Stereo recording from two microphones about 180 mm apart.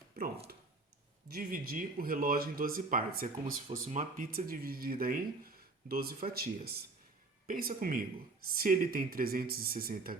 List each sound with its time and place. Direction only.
1.3 s speech: 50° right (ahead or behind)
3.7 s speech: 40° right (ahead or behind)